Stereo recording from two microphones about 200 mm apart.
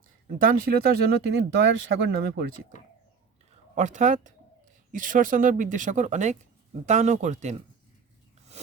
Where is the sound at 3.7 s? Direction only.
35° right (ahead or behind).